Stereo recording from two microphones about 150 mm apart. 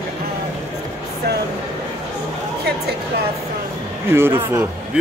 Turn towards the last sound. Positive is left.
turn(degrees=-15)  # may be behind; listen again after turning